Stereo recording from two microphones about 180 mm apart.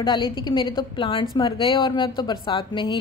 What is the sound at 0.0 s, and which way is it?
A woman's voice, 25° left (ahead or behind).